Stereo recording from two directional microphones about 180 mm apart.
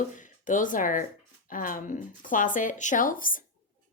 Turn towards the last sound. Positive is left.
turn(degrees=50)  # may be behind; listen again after turning